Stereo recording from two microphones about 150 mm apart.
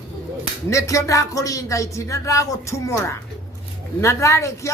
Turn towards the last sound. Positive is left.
turn(degrees=20)  # may be behind; listen again after turning